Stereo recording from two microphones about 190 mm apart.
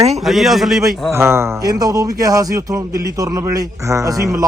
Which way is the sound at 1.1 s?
15° right (ahead or behind).